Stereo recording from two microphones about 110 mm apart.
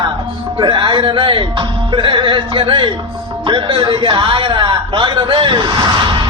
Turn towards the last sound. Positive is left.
turn(degrees=-45)  # may be behind; listen again after turning